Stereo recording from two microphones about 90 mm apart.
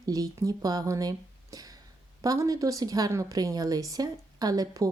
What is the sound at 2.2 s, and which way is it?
Speech, 40° right (ahead or behind).